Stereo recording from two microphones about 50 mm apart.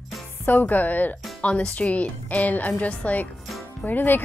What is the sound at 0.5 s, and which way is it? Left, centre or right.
Speech, left.